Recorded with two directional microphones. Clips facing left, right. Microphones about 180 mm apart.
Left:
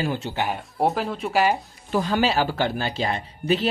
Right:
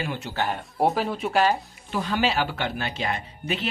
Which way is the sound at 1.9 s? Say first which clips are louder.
Left 3 dB; 40° left (ahead or behind).